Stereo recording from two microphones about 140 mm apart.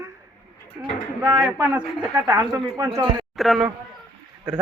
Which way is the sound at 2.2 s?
20° right (ahead or behind).